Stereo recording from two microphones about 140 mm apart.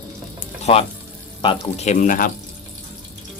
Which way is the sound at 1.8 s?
60° left (ahead or behind).